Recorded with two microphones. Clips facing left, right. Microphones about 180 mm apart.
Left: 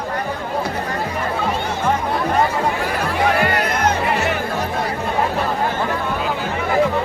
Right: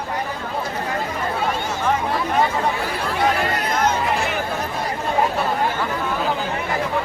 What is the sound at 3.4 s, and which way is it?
Music, 65° left (ahead or behind).